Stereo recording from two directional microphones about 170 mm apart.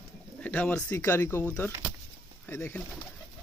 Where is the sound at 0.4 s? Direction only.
10° left (ahead or behind).